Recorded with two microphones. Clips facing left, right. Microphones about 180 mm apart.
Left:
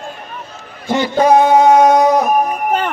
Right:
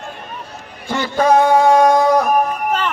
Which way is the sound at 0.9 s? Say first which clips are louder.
Left 3 dB; 20° left (ahead or behind).